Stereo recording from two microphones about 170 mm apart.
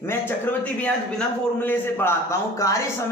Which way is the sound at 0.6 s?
10° left (ahead or behind).